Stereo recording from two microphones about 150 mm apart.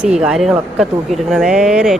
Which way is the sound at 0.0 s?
5° right (ahead or behind).